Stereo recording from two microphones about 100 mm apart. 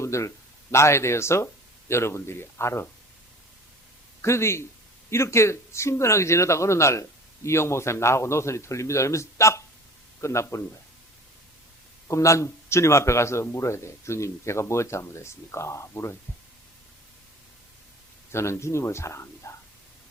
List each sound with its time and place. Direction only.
0.0 s speech: 30° left (ahead or behind)
4.2 s speech: 25° left (ahead or behind)
12.0 s speech: 30° left (ahead or behind)
18.3 s speech: 25° left (ahead or behind)